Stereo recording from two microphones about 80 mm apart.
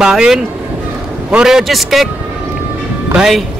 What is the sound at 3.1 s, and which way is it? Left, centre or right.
Speech, centre.